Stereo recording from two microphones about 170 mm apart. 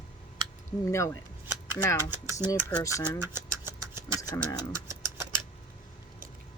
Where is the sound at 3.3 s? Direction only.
15° right (ahead or behind).